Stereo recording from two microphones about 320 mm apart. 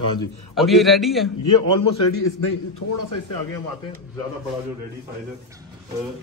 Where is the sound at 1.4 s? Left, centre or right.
Left.